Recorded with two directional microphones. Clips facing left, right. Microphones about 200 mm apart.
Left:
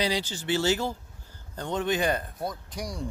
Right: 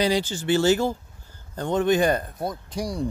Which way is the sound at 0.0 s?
50° right (ahead or behind).